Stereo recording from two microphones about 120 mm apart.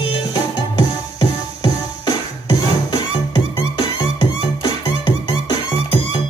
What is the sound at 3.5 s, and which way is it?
Music, 40° left (ahead or behind).